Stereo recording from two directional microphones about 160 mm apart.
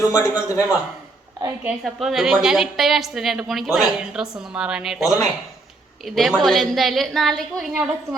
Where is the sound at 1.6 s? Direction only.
Centre (ahead or behind).